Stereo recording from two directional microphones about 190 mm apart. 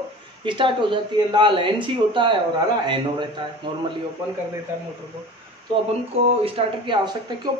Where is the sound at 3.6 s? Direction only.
25° right (ahead or behind).